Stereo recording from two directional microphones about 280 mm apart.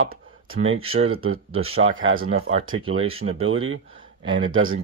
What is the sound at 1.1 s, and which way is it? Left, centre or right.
Speech, right.